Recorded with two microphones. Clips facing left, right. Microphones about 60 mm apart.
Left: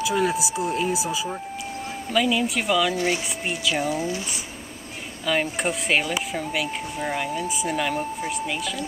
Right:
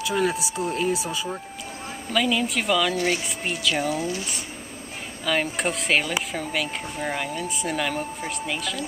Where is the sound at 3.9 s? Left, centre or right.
Left.